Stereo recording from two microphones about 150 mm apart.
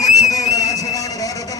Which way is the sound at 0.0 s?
25° left (ahead or behind).